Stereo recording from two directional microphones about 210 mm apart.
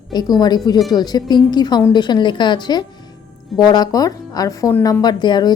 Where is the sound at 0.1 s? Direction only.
20° left (ahead or behind).